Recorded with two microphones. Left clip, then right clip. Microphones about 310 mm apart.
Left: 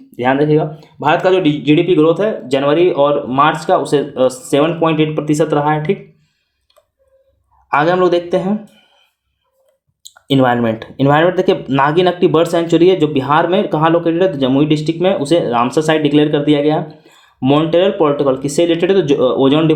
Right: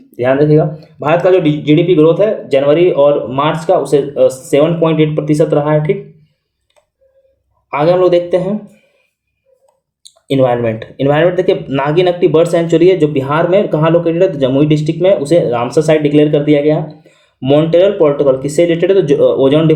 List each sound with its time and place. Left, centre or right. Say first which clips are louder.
0.1 s speech: right 3 dB; centre
7.7 s speech: right 2 dB; centre
10.2 s speech: right 1 dB; left